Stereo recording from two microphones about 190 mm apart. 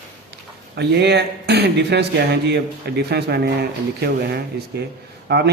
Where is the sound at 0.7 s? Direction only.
60° right (ahead or behind).